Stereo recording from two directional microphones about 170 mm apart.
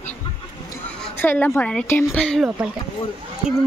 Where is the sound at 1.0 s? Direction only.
10° left (ahead or behind).